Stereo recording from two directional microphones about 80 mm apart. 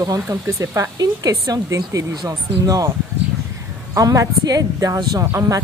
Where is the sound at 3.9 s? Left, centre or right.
Right.